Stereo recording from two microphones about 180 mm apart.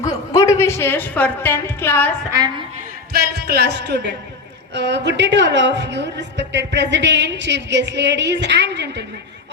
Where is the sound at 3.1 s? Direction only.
60° right (ahead or behind).